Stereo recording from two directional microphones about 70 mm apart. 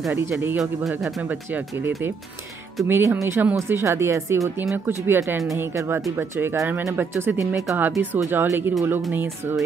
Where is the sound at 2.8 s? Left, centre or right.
Right.